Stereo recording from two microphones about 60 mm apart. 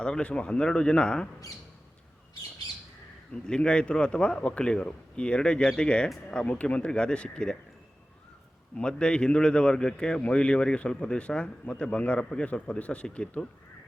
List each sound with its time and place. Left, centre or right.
0.0 s speech: centre
3.3 s speech: centre
8.7 s speech: centre